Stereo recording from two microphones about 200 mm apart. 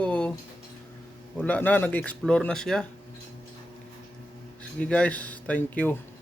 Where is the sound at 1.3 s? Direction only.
10° left (ahead or behind).